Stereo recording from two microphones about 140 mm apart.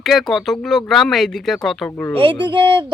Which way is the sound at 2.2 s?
35° right (ahead or behind).